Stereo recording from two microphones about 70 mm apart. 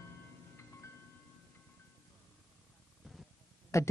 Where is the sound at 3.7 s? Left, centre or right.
Left.